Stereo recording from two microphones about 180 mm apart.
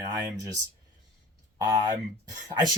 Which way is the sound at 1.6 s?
20° right (ahead or behind).